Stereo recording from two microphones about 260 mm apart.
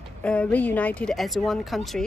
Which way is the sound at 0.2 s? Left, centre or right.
Centre.